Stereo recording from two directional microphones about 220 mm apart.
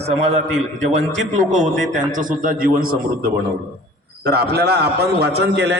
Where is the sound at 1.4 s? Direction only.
35° right (ahead or behind).